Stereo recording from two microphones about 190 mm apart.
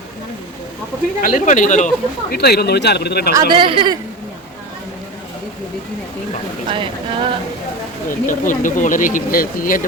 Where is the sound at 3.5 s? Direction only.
25° right (ahead or behind).